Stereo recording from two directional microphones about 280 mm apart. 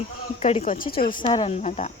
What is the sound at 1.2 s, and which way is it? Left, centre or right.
Speech, centre.